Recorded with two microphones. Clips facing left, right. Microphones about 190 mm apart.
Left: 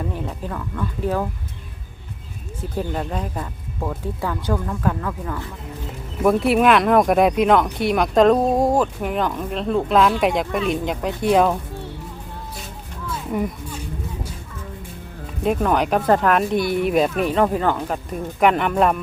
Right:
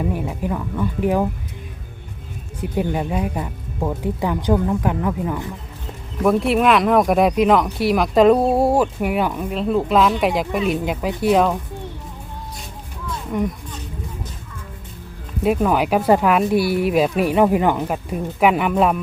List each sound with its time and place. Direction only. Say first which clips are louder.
0.0 s speech: right 4 dB; 10° right (ahead or behind)
2.6 s speech: right 4 dB; 10° right (ahead or behind)
6.2 s speech: even; centre (ahead or behind)
13.3 s speech: right 2 dB; 5° left (ahead or behind)
15.4 s speech: right 2 dB; 5° right (ahead or behind)